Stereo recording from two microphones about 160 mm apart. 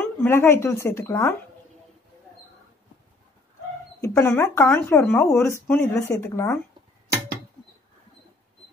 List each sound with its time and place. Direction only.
0.0 s speech: 15° left (ahead or behind)
4.0 s speech: 20° left (ahead or behind)